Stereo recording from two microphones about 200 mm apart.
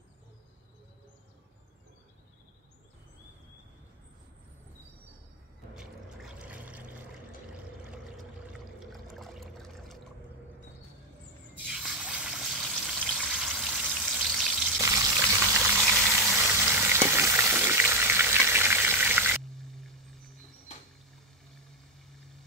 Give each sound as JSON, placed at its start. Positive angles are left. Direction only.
{"t": 5.8, "sound": "a sound", "side_deg": -5}
{"t": 8.7, "sound": "water", "side_deg": 0}
{"t": 11.6, "sound": "water", "side_deg": -5}
{"t": 14.8, "sound": "frying", "side_deg": -15}
{"t": 19.6, "sound": "music", "side_deg": 0}